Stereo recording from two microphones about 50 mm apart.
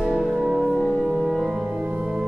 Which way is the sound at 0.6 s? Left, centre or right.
Centre.